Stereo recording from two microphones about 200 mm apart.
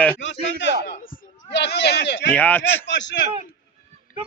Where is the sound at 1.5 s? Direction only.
60° left (ahead or behind).